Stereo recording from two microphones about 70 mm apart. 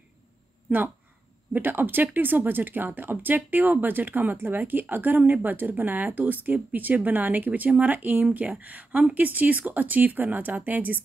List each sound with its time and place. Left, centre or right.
0.7 s speech: right